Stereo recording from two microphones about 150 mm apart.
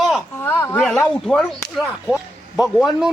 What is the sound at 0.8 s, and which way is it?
Speech, 5° left (ahead or behind).